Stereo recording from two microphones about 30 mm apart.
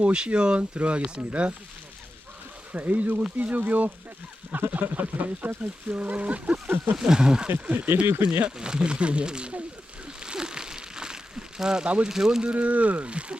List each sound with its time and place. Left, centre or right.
0.0 s speech: right
0.8 s speech: right
2.7 s speech: right
5.9 s speech: right
6.9 s speech: right
7.4 s speech: right
8.2 s speech: right
8.4 s speech: right
10.2 s a sound: right
12.0 s speech: centre
12.5 s speech: right
13.1 s speech: right